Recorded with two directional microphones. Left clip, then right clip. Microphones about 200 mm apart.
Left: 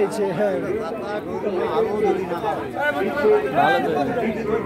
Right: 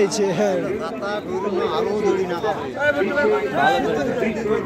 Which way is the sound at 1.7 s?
45° right (ahead or behind).